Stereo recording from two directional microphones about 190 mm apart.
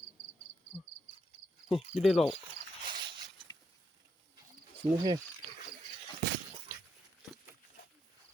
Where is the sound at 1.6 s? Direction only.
Centre (ahead or behind).